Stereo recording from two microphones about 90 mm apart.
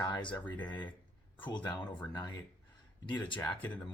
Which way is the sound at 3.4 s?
20° left (ahead or behind).